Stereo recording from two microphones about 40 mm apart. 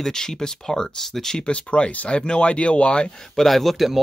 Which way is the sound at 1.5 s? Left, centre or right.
Left.